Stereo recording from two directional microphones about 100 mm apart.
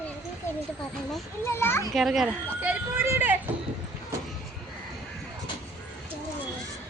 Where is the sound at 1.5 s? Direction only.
25° left (ahead or behind).